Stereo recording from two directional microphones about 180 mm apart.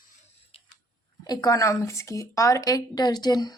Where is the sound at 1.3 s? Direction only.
20° left (ahead or behind).